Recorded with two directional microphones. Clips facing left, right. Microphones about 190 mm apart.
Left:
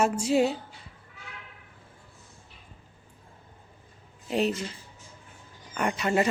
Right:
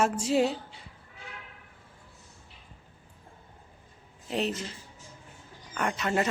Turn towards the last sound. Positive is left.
turn(degrees=10)  # may be behind; listen again after turning